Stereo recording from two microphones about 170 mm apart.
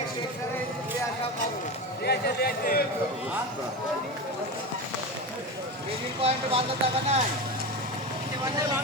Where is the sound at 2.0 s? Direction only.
70° left (ahead or behind).